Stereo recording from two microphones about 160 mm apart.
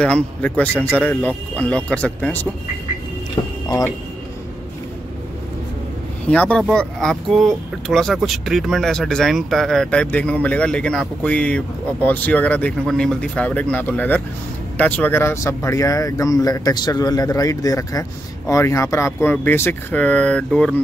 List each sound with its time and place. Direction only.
0.0 s speech: 5° left (ahead or behind)
3.6 s speech: 20° left (ahead or behind)
6.2 s speech: 5° left (ahead or behind)